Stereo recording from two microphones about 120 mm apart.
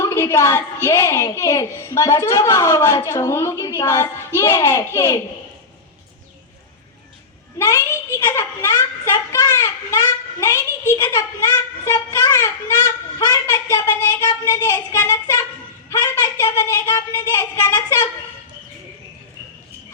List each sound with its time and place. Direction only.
0.0 s a child's voice: 25° left (ahead or behind)
7.6 s a child's voice: 20° left (ahead or behind)